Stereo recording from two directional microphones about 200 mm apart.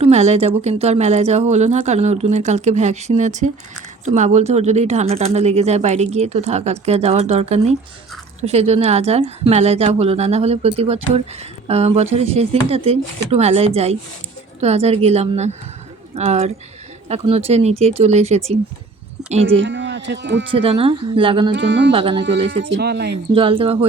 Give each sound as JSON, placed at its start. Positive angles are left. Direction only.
{"t": 0.0, "sound": "speech", "side_deg": -30}
{"t": 19.5, "sound": "speech", "side_deg": -60}
{"t": 20.5, "sound": "speech", "side_deg": -25}
{"t": 21.5, "sound": "speech", "side_deg": -60}
{"t": 21.9, "sound": "speech", "side_deg": -25}
{"t": 22.2, "sound": "speech", "side_deg": -60}
{"t": 23.3, "sound": "speech", "side_deg": -25}